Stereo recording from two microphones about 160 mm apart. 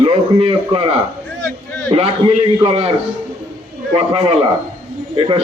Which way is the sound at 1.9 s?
35° right (ahead or behind).